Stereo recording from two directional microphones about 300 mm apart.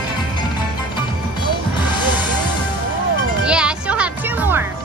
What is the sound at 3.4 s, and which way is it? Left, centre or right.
Music, centre.